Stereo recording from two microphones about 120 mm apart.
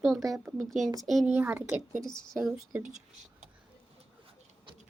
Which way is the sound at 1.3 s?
15° right (ahead or behind).